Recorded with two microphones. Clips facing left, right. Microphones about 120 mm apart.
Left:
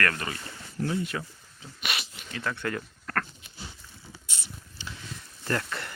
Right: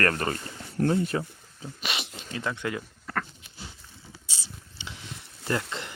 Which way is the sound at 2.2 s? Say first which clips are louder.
Right 2 dB; 25° right (ahead or behind).